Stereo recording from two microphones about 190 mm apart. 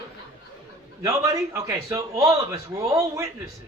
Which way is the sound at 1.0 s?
15° right (ahead or behind).